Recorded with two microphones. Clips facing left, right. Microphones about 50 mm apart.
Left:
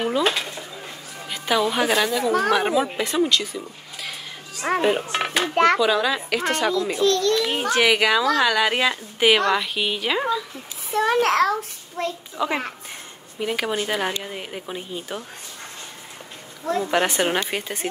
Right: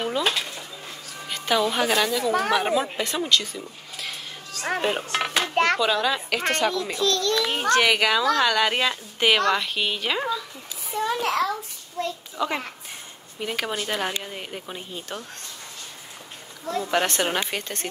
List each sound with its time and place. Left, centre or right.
0.0 s dishes: centre
1.2 s a woman's voice: centre
4.6 s a woman's voice: centre
6.9 s a child's voice: left
7.4 s a woman's voice: centre
10.9 s a child's voice: left
12.4 s a woman's voice: centre
16.9 s speech: centre